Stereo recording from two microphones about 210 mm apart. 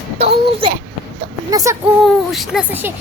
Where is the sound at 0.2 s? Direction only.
25° right (ahead or behind).